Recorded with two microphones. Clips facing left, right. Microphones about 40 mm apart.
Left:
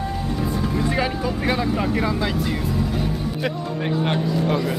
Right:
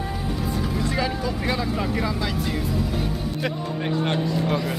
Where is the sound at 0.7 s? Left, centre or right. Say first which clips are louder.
Left 4 dB; centre.